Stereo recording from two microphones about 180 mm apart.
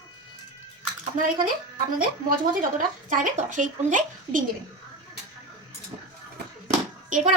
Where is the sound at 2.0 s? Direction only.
50° right (ahead or behind).